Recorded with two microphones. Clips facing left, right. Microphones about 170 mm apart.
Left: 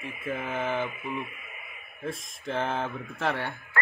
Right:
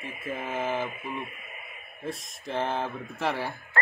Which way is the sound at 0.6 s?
5° right (ahead or behind).